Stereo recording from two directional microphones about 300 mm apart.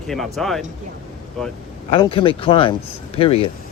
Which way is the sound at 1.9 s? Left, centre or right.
Centre.